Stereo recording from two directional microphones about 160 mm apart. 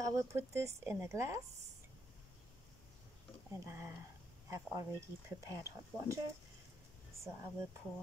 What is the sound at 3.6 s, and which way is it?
Speech, 15° right (ahead or behind).